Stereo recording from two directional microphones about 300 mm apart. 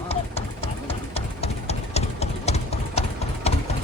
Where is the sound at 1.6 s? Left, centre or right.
Left.